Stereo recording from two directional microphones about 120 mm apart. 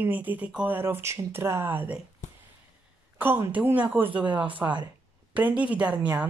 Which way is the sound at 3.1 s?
15° right (ahead or behind).